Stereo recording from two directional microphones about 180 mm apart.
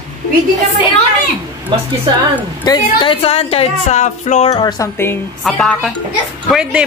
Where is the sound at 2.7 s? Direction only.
25° left (ahead or behind).